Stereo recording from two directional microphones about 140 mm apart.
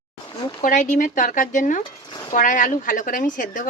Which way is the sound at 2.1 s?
30° left (ahead or behind).